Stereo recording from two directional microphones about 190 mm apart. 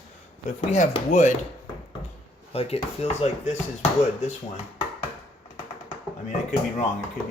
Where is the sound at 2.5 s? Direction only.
30° left (ahead or behind).